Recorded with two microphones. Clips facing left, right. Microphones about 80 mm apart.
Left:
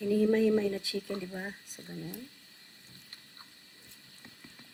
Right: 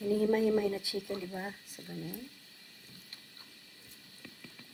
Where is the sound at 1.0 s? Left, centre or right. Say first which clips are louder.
Left 1 dB; left.